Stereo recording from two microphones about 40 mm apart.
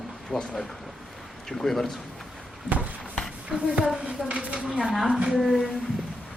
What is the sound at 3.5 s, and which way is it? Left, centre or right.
Speech, centre.